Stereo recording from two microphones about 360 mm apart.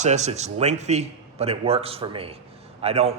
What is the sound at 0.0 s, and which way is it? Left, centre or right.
A man's voice, centre.